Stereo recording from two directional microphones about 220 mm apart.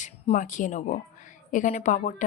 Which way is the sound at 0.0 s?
35° left (ahead or behind).